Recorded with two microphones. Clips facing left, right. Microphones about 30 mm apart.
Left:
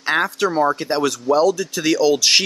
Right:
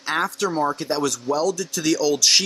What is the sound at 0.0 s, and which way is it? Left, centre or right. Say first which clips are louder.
Speech: left 4 dB; centre.